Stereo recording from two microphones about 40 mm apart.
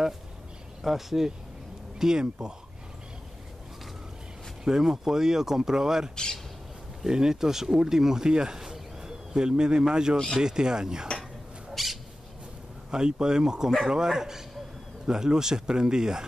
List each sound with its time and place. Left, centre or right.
0.8 s speech: centre
4.6 s speech: centre
10.1 s speech: centre
10.4 s speech: centre
11.7 s owl: centre
12.9 s speech: centre